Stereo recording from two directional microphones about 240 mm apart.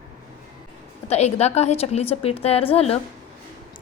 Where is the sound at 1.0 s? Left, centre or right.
Left.